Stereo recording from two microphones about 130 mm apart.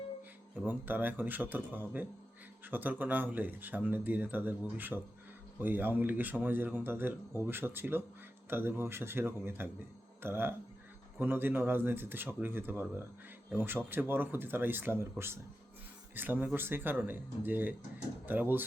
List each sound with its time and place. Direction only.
0.5 s speech: 15° right (ahead or behind)
4.9 s speech: centre (ahead or behind)
5.5 s speech: 15° right (ahead or behind)
16.1 s speech: 15° right (ahead or behind)